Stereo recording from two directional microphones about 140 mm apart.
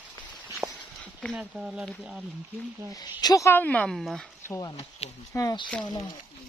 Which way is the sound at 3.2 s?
25° left (ahead or behind).